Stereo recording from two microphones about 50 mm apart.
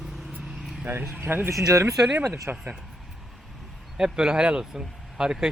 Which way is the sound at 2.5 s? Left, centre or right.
Right.